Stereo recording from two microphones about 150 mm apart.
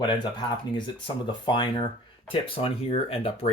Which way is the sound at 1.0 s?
30° left (ahead or behind).